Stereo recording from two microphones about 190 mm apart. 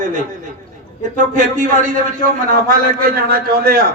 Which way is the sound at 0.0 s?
40° right (ahead or behind).